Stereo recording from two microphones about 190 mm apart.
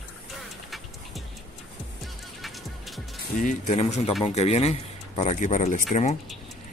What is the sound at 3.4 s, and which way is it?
Speech, 40° left (ahead or behind).